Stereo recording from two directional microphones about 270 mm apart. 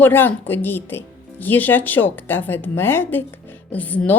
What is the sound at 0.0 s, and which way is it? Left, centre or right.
Speech, centre.